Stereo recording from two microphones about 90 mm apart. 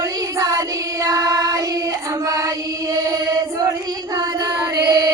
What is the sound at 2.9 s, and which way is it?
Chant, 40° right (ahead or behind).